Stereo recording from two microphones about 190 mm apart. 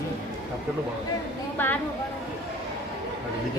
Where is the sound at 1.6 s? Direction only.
10° left (ahead or behind).